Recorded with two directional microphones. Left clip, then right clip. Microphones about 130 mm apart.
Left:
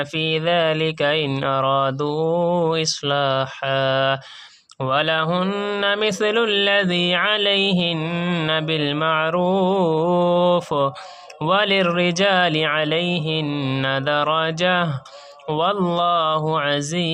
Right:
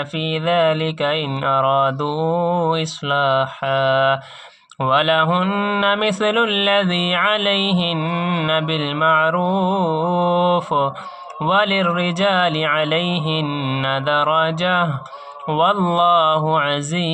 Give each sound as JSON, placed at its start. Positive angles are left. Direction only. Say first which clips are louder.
{"t": 0.2, "sound": "speech", "louder": "right 2 dB", "side_deg": 25}